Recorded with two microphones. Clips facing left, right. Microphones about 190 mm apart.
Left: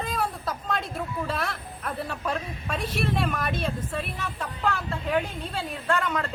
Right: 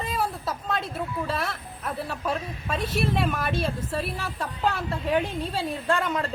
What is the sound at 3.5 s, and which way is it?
Speech, 30° right (ahead or behind).